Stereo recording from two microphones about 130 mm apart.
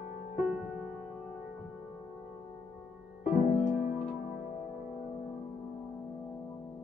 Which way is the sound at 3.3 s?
70° left (ahead or behind).